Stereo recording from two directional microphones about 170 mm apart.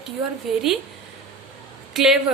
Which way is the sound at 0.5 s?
Centre (ahead or behind).